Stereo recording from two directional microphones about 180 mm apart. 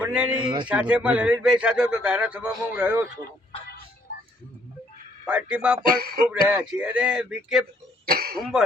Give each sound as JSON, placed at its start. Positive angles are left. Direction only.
{"t": 0.0, "sound": "a sound", "side_deg": -5}
{"t": 0.3, "sound": "speech", "side_deg": -25}
{"t": 0.7, "sound": "speech", "side_deg": -5}
{"t": 5.2, "sound": "speech", "side_deg": -5}
{"t": 5.8, "sound": "music", "side_deg": -55}
{"t": 6.5, "sound": "speech", "side_deg": -10}
{"t": 8.0, "sound": "cough", "side_deg": -60}
{"t": 8.4, "sound": "speech", "side_deg": 0}